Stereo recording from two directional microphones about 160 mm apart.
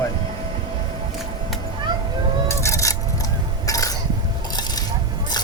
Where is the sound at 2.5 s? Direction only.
20° left (ahead or behind).